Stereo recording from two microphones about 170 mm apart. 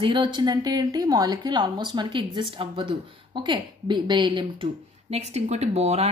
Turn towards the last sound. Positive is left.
turn(degrees=-40)  # may be behind; listen again after turning